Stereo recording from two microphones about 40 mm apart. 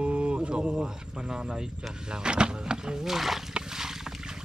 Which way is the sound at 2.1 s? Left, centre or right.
Right.